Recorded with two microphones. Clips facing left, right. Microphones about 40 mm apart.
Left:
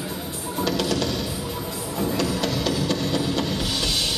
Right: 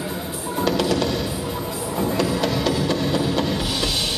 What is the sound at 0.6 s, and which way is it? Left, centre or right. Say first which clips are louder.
Music: right 3 dB; centre.